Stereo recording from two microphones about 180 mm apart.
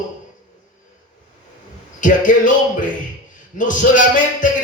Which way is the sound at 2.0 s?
45° left (ahead or behind).